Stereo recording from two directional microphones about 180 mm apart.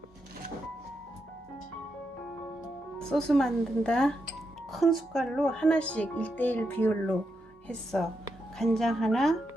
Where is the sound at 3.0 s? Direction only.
5° left (ahead or behind).